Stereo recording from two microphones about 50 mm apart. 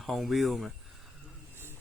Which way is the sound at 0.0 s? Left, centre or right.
Centre.